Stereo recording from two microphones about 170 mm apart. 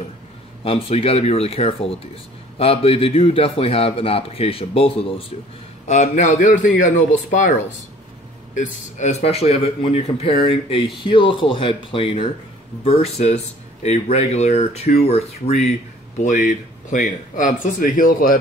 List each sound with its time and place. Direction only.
0.7 s a man's voice: 35° left (ahead or behind)
5.9 s speech: 45° left (ahead or behind)
8.5 s a man's voice: 45° left (ahead or behind)
16.4 s speech: 55° left (ahead or behind)